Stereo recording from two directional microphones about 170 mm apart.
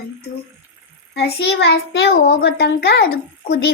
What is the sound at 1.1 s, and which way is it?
A child's voice, 75° left (ahead or behind).